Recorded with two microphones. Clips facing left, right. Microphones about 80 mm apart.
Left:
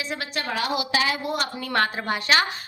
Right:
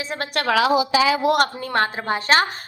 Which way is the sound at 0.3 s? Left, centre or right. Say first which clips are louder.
Right 10 dB; right.